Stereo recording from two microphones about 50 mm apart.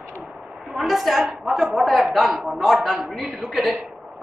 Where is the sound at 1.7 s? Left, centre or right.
Right.